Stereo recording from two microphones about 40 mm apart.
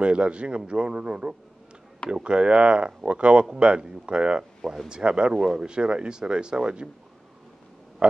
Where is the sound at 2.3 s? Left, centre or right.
Right.